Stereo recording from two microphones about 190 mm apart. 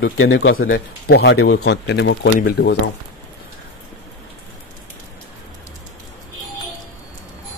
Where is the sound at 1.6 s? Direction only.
60° left (ahead or behind).